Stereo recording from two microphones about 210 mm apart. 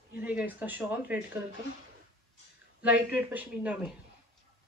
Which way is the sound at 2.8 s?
5° right (ahead or behind).